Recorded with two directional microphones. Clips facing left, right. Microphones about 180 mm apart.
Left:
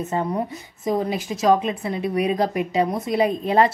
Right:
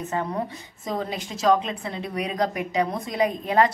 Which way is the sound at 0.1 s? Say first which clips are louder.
Left 3 dB; 20° left (ahead or behind).